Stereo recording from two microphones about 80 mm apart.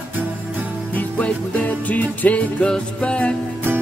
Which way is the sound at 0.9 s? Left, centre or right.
Centre.